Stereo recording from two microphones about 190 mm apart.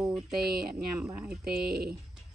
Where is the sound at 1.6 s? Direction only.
55° right (ahead or behind).